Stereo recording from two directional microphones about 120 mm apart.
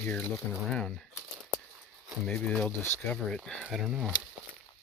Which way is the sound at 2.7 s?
20° left (ahead or behind).